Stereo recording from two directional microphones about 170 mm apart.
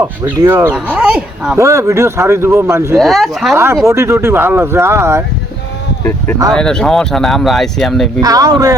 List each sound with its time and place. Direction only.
0.3 s speech: 15° right (ahead or behind)
3.0 s speech: centre (ahead or behind)
3.5 s speech: 15° right (ahead or behind)
6.0 s speech: 15° left (ahead or behind)
8.2 s speech: 20° right (ahead or behind)